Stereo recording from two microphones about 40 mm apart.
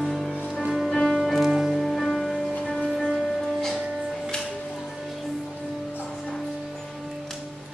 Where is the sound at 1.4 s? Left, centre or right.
Centre.